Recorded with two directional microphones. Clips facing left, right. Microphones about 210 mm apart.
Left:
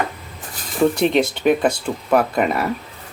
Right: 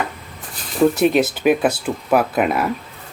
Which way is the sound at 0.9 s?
5° right (ahead or behind).